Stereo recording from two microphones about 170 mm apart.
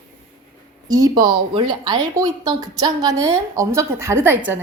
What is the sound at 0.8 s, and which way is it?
Speech, 20° right (ahead or behind).